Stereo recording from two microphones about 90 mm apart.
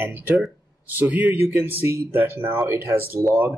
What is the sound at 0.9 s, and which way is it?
A man's voice, 15° right (ahead or behind).